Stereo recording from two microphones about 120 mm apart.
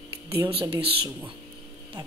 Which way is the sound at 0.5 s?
50° right (ahead or behind).